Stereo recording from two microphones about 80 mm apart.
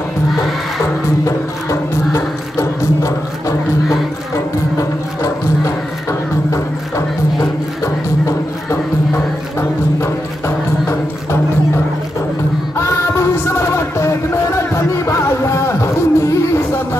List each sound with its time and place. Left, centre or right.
0.4 s music: centre
1.2 s music: left
7.8 s music: left
12.7 s music: left